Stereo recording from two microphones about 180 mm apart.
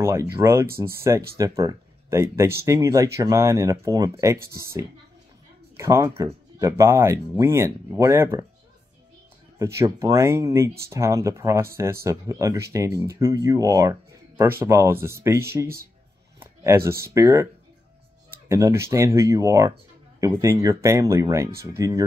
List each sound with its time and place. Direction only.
0.0 s speech: 15° right (ahead or behind)
5.8 s speech: 15° right (ahead or behind)
9.6 s speech: 15° right (ahead or behind)
16.3 s a sound: 15° right (ahead or behind)
17.0 s speech: 15° right (ahead or behind)
18.5 s speech: 15° right (ahead or behind)